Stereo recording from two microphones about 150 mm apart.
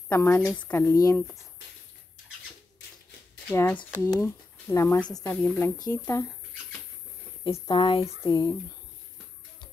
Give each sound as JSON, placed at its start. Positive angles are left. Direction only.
{"t": 0.1, "sound": "speech", "side_deg": 15}
{"t": 3.5, "sound": "speech", "side_deg": 15}
{"t": 5.9, "sound": "speech", "side_deg": 20}
{"t": 7.4, "sound": "speech", "side_deg": 35}
{"t": 8.2, "sound": "speech", "side_deg": 25}